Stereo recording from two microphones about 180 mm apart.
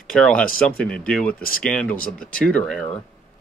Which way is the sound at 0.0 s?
5° left (ahead or behind).